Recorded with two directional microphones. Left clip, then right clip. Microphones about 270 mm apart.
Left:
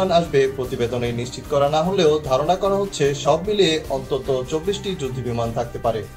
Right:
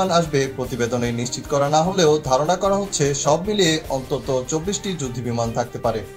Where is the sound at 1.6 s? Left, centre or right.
Right.